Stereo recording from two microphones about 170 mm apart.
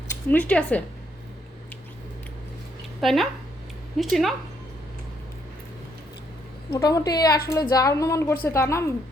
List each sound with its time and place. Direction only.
0.3 s speech: 10° left (ahead or behind)
3.0 s speech: centre (ahead or behind)
6.7 s a woman's voice: 20° left (ahead or behind)